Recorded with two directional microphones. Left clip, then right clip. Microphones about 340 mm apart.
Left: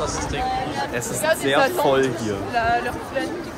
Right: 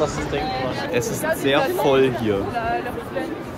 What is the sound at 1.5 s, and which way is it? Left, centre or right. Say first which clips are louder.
Speech: right 1 dB; centre.